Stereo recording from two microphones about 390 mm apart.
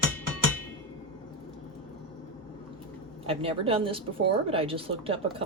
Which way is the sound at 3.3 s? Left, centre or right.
Centre.